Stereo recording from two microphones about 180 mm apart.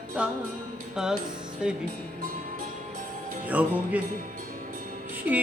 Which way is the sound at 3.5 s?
10° right (ahead or behind).